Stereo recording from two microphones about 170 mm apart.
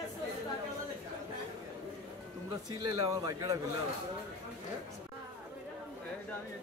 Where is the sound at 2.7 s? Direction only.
20° right (ahead or behind).